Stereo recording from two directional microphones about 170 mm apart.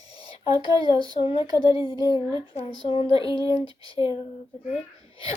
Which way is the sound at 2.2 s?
30° left (ahead or behind).